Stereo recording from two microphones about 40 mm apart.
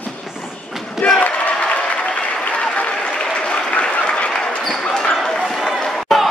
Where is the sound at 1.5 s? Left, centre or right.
Left.